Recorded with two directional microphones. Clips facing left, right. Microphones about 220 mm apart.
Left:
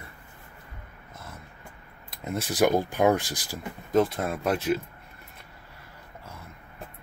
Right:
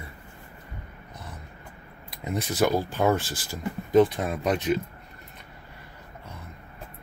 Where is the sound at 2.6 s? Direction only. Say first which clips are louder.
Left 2 dB; 20° left (ahead or behind).